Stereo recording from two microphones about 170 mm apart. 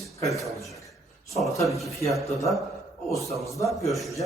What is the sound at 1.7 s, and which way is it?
Speech, centre (ahead or behind).